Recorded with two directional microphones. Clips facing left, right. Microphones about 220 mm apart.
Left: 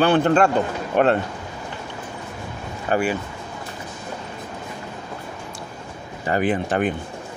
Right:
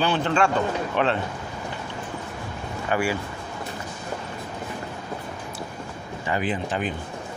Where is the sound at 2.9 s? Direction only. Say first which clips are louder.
Left 4 dB; 40° left (ahead or behind).